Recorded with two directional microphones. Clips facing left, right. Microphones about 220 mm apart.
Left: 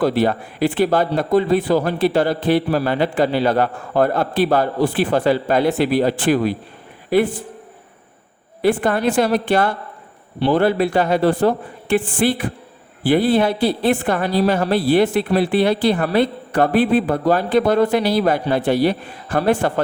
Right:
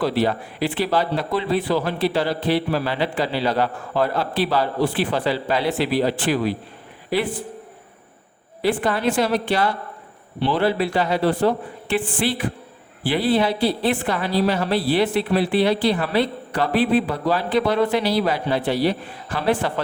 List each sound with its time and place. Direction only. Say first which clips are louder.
0.0 s a woman's voice: left 3 dB; 50° left (ahead or behind)
8.6 s a woman's voice: left 4 dB; 50° left (ahead or behind)